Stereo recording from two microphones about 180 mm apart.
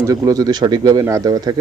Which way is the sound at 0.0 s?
20° right (ahead or behind).